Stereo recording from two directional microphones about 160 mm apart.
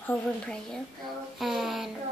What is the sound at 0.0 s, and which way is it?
Speech, 5° left (ahead or behind).